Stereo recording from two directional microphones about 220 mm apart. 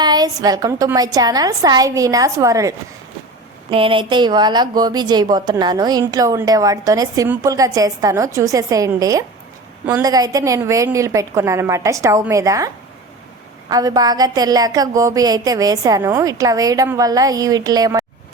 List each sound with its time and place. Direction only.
0.0 s speech: 20° right (ahead or behind)